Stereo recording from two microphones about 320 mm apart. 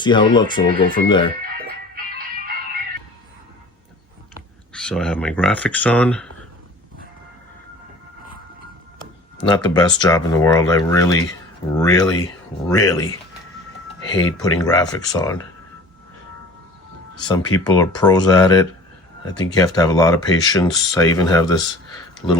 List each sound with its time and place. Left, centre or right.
0.0 s speech: centre
1.6 s music: right
4.7 s speech: centre
9.6 s speech: centre
17.2 s speech: centre